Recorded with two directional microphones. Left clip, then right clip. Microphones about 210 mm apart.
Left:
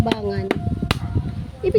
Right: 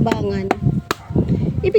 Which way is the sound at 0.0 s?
15° right (ahead or behind).